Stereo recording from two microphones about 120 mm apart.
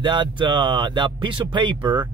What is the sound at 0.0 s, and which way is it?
Speech, 40° right (ahead or behind).